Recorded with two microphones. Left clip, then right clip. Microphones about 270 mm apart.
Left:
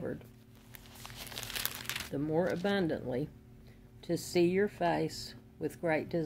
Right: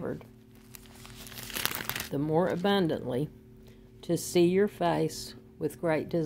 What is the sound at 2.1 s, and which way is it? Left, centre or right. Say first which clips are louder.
Speech: right 5 dB; right.